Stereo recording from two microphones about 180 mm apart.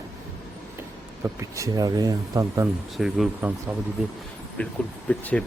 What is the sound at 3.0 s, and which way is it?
Speech, centre (ahead or behind).